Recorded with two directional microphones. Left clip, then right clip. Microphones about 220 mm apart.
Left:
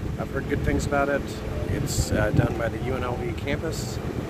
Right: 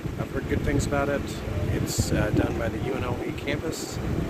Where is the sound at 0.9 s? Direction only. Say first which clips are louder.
Left 5 dB; 15° left (ahead or behind).